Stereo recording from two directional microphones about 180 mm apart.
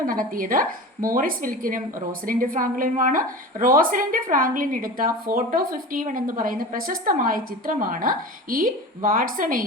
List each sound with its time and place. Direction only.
0.0 s a woman's voice: 50° right (ahead or behind)